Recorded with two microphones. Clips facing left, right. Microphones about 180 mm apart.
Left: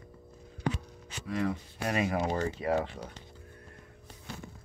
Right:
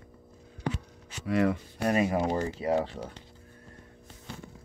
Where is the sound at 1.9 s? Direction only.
35° right (ahead or behind).